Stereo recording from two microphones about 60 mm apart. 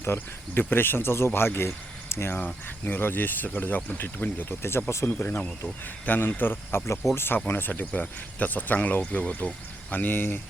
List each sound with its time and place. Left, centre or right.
0.0 s speech: left
2.8 s speech: left